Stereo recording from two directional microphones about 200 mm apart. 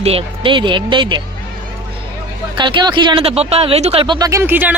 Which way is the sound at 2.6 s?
25° right (ahead or behind).